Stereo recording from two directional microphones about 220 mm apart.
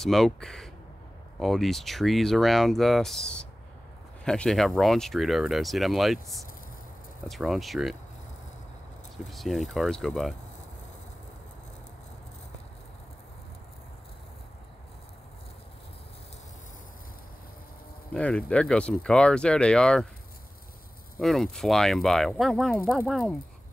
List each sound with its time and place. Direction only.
0.0 s speech: centre (ahead or behind)
7.2 s speech: centre (ahead or behind)
9.2 s speech: centre (ahead or behind)
18.1 s speech: 5° left (ahead or behind)
21.2 s speech: centre (ahead or behind)